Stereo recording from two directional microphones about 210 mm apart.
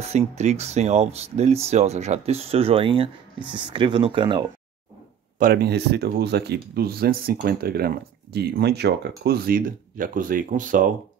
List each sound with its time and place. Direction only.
0.0 s speech: 30° right (ahead or behind)
5.4 s speech: 50° right (ahead or behind)